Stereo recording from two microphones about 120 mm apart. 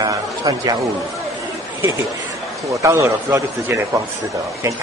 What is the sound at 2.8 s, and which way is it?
A man's voice, 25° right (ahead or behind).